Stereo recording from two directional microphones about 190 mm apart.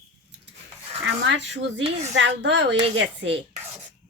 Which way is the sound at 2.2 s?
70° right (ahead or behind).